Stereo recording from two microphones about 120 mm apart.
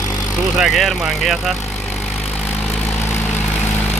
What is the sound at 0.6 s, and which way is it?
Speech, centre (ahead or behind).